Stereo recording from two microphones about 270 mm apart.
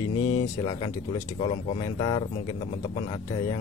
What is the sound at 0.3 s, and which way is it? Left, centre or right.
A man's voice, centre.